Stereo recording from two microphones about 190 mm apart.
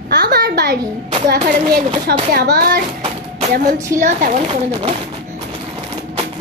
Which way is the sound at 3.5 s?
45° right (ahead or behind).